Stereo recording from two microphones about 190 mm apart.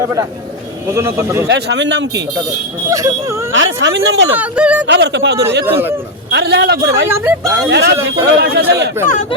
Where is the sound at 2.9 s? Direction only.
15° right (ahead or behind).